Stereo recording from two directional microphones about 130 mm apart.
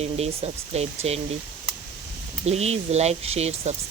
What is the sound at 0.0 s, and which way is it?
Speech, 50° right (ahead or behind).